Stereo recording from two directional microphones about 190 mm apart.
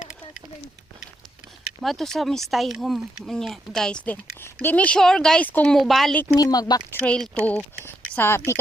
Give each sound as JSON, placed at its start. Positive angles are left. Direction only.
{"t": 1.8, "sound": "speech", "side_deg": 0}
{"t": 6.2, "sound": "speech", "side_deg": 20}
{"t": 7.0, "sound": "speech", "side_deg": 5}